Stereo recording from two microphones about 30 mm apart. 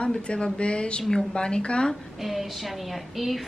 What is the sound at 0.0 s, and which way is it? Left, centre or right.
Speech, left.